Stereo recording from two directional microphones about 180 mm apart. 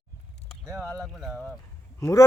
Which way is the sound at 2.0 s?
15° left (ahead or behind).